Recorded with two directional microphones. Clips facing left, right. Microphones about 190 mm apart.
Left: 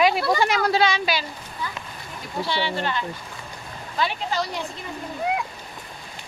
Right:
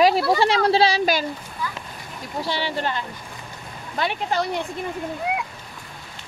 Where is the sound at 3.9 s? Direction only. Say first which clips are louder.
Right 2 dB; 55° right (ahead or behind).